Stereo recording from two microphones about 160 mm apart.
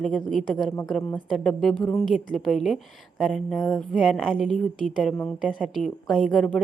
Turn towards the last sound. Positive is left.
turn(degrees=0)  # may be behind; listen again after turning